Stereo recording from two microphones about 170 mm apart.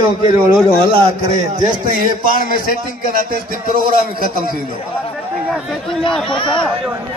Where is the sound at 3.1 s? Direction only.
55° right (ahead or behind).